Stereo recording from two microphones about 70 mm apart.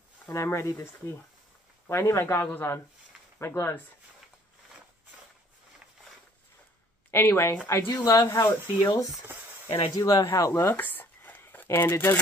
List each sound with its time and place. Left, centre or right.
0.3 s speech: left
1.9 s speech: left
7.1 s speech: left
10.8 s a sound: left